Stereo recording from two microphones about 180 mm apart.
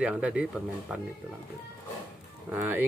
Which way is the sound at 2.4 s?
10° right (ahead or behind).